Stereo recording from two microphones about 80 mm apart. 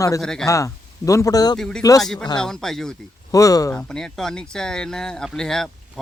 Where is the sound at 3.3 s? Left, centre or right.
Left.